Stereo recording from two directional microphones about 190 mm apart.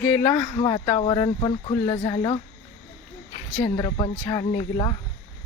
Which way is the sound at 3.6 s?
20° left (ahead or behind).